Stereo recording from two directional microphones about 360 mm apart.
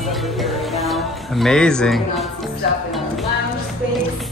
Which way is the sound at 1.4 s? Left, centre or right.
Centre.